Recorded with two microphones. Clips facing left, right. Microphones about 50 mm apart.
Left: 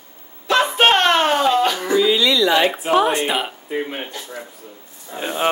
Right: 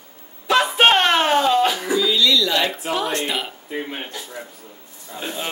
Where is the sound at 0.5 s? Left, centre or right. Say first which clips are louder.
Even; centre.